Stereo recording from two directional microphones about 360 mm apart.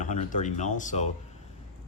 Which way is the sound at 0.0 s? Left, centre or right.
Left.